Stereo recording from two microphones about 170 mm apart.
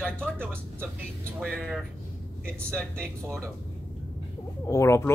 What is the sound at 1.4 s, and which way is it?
Speech, 5° left (ahead or behind).